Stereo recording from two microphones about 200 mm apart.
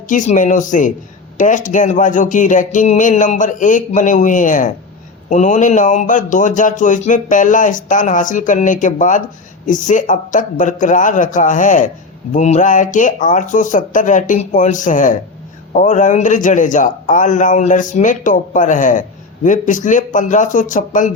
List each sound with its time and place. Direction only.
0.1 s a man's voice: 40° left (ahead or behind)